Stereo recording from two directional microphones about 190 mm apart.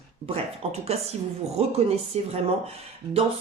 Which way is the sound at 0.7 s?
35° right (ahead or behind).